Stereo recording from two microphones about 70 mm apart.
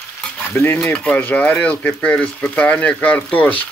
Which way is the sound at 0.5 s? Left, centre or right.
Left.